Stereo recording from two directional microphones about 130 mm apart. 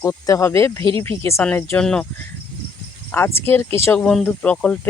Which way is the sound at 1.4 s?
10° left (ahead or behind).